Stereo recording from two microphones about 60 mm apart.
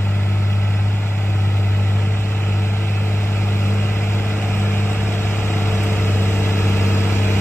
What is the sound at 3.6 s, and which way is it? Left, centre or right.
Vehicle, left.